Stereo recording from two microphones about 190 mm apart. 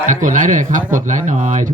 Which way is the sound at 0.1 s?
40° right (ahead or behind).